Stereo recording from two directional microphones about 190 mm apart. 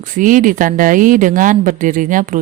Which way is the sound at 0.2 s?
45° right (ahead or behind).